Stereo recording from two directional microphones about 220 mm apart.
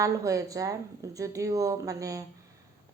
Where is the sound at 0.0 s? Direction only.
15° right (ahead or behind).